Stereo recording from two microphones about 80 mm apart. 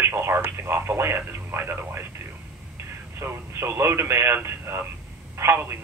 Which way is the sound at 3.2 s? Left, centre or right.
Right.